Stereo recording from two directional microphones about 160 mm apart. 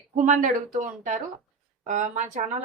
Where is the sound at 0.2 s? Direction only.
55° right (ahead or behind).